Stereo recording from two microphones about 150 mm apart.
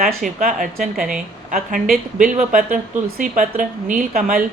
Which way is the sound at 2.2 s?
60° right (ahead or behind).